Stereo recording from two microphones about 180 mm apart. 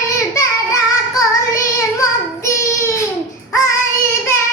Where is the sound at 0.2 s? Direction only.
20° left (ahead or behind).